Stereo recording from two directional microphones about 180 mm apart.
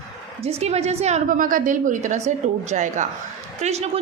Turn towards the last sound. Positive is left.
turn(degrees=-35)  # may be behind; listen again after turning